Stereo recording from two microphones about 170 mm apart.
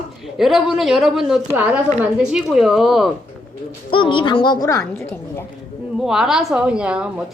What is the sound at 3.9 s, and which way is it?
A woman's voice, 30° left (ahead or behind).